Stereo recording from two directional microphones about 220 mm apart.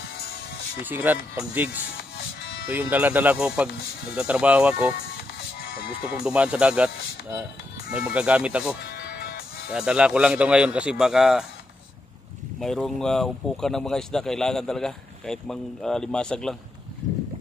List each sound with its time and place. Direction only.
0.2 s music: 45° left (ahead or behind)
0.8 s speech: 10° right (ahead or behind)
2.0 s music: 45° left (ahead or behind)
2.7 s speech: 10° right (ahead or behind)
4.9 s music: 45° left (ahead or behind)
6.2 s speech: 5° right (ahead or behind)
8.8 s music: 50° left (ahead or behind)
9.7 s speech: 5° right (ahead or behind)
12.5 s speech: centre (ahead or behind)
17.0 s boat: 35° right (ahead or behind)